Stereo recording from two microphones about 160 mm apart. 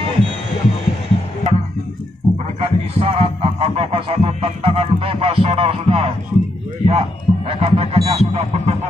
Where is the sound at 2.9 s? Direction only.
35° right (ahead or behind).